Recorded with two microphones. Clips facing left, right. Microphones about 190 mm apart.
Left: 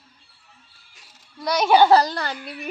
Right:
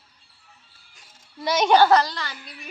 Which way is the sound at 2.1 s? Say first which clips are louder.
Left 6 dB; 55° left (ahead or behind).